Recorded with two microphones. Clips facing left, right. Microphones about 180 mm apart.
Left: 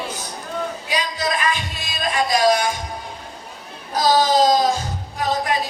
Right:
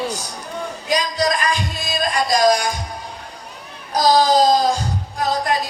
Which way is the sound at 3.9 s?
40° right (ahead or behind).